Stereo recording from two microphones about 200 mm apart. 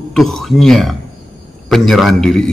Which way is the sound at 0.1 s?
Centre (ahead or behind).